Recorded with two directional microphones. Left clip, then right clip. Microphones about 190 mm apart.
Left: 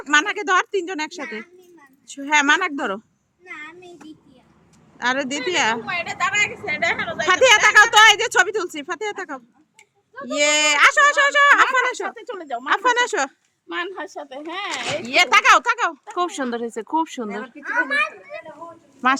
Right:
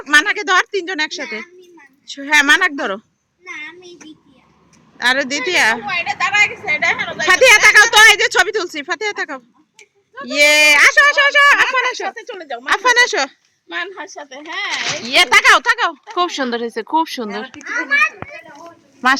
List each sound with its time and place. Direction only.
0.0 s speech: 5° left (ahead or behind)
4.9 s speech: 5° left (ahead or behind)
5.8 s a woman's voice: 70° left (ahead or behind)
7.3 s speech: 5° right (ahead or behind)
10.9 s speech: 15° left (ahead or behind)
12.1 s a woman's voice: 65° left (ahead or behind)
12.6 s speech: centre (ahead or behind)
13.7 s a woman's voice: 70° left (ahead or behind)
15.0 s speech: centre (ahead or behind)
17.7 s speech: 15° left (ahead or behind)